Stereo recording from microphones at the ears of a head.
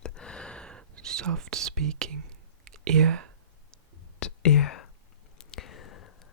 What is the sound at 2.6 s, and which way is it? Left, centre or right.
Whispering, right.